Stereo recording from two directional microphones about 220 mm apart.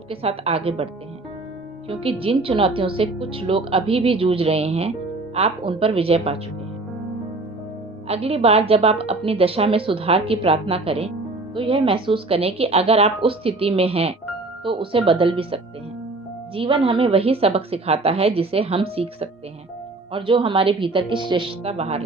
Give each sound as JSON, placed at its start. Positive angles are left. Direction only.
{"t": 0.1, "sound": "a woman's voice", "side_deg": -25}
{"t": 1.9, "sound": "a woman's voice", "side_deg": -25}
{"t": 8.0, "sound": "a woman's voice", "side_deg": -25}